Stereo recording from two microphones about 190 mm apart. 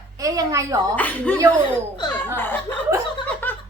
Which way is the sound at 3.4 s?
10° left (ahead or behind).